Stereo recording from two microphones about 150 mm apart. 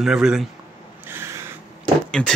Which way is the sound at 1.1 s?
15° right (ahead or behind).